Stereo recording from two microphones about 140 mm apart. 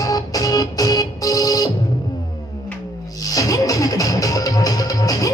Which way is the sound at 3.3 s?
25° left (ahead or behind).